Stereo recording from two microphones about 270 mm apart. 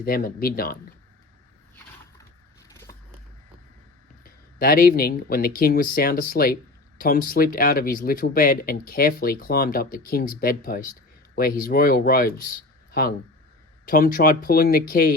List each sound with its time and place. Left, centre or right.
0.0 s speech: left
4.2 s speech: left